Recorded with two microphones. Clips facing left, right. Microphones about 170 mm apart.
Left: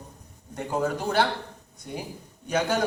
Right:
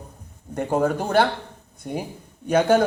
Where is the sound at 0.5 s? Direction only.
50° right (ahead or behind).